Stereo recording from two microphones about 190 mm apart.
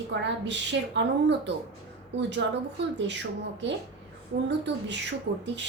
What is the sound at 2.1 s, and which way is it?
A woman's voice, 70° right (ahead or behind).